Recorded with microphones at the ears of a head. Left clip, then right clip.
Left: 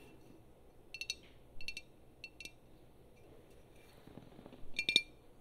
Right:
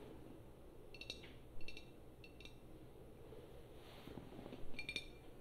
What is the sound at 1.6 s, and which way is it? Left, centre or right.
Chink, left.